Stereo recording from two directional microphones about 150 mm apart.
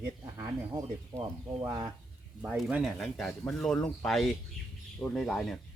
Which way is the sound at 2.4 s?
5° right (ahead or behind).